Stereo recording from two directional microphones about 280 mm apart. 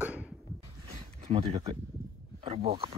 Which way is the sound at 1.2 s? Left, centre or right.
Centre.